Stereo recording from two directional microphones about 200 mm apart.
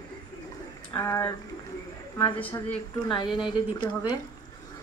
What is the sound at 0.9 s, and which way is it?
Speech, 15° left (ahead or behind).